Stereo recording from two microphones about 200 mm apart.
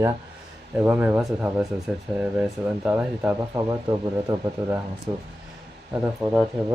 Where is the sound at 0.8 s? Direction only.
10° right (ahead or behind).